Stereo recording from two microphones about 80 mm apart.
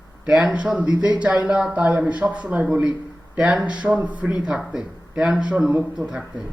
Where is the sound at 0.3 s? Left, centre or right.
Centre.